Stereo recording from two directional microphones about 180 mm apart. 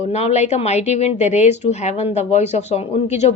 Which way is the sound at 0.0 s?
35° left (ahead or behind).